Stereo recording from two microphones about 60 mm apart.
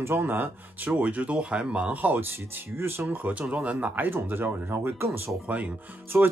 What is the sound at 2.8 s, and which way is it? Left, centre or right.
Speech, right.